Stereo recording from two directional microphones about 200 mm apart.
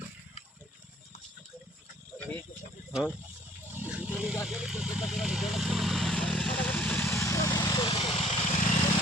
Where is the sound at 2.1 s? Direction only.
10° left (ahead or behind).